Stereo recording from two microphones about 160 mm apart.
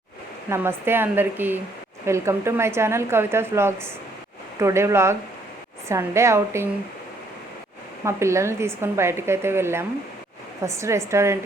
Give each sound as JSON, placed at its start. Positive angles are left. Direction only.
{"t": 0.5, "sound": "a woman's voice", "side_deg": -15}
{"t": 8.0, "sound": "a woman's voice", "side_deg": -20}